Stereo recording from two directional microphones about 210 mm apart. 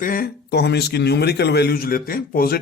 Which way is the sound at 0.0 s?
40° left (ahead or behind).